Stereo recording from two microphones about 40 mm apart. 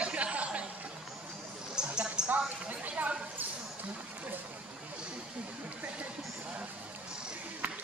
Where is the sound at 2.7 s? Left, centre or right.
Right.